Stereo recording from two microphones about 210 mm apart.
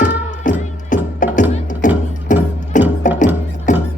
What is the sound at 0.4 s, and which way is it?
Music, 40° left (ahead or behind).